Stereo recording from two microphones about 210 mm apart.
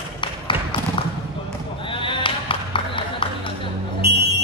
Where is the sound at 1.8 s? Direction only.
25° left (ahead or behind).